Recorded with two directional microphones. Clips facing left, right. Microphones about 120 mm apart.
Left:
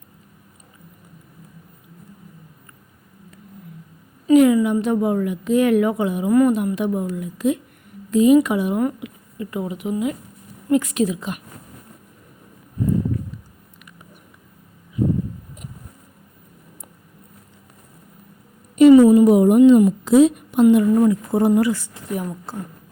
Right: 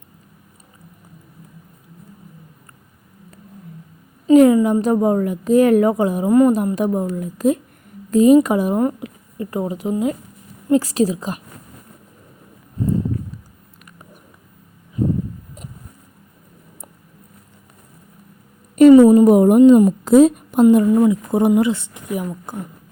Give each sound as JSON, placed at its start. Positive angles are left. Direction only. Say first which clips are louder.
{"t": 4.3, "sound": "a woman's voice", "louder": "right 3 dB", "side_deg": -35}
{"t": 18.8, "sound": "a sound", "louder": "right 2 dB", "side_deg": -40}
{"t": 20.8, "sound": "speech", "louder": "right 1 dB", "side_deg": -15}
{"t": 22.1, "sound": "a woman's voice", "louder": "right 2 dB", "side_deg": -10}